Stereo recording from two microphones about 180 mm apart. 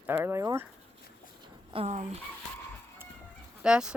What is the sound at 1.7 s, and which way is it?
Speech, 35° right (ahead or behind).